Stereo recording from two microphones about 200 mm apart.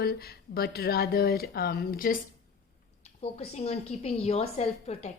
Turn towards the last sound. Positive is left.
turn(degrees=30)  # may be behind; listen again after turning